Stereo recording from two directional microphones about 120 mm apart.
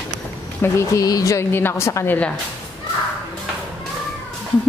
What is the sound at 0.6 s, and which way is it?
A woman's voice, 25° left (ahead or behind).